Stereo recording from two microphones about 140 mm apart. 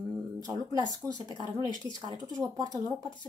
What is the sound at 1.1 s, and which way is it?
Speech, 35° left (ahead or behind).